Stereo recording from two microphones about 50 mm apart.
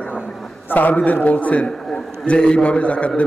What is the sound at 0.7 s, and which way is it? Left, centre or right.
A man's voice, left.